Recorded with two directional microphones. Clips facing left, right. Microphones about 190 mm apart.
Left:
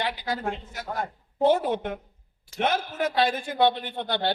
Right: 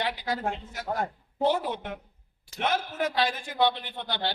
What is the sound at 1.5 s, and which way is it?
Speech, 50° left (ahead or behind).